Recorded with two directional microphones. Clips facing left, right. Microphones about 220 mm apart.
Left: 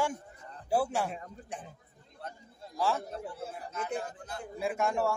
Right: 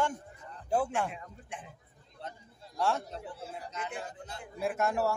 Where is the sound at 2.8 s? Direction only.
Centre (ahead or behind).